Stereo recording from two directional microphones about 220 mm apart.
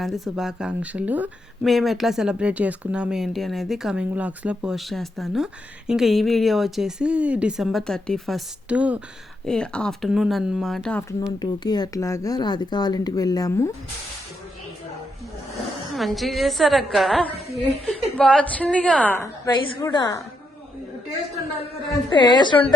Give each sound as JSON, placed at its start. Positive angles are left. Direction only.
{"t": 0.0, "sound": "speech", "side_deg": 0}
{"t": 11.3, "sound": "speech", "side_deg": 20}
{"t": 16.0, "sound": "speech", "side_deg": 0}
{"t": 19.5, "sound": "a woman's voice", "side_deg": 20}
{"t": 22.1, "sound": "a woman's voice", "side_deg": 20}